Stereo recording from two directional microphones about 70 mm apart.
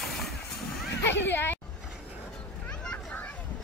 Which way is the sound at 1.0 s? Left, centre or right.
Left.